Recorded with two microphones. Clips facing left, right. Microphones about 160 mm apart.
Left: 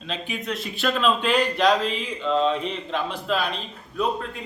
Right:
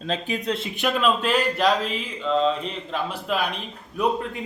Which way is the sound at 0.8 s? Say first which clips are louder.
Even; 15° right (ahead or behind).